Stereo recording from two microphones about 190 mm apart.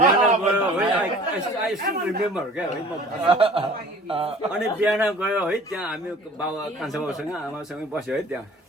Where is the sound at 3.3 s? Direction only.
30° right (ahead or behind).